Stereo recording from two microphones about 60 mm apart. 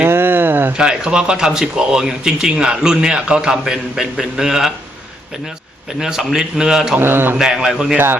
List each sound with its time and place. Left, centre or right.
0.0 s a sound: right
0.8 s speech: centre
6.0 s speech: centre
7.0 s speech: right
7.3 s speech: centre
7.9 s speech: right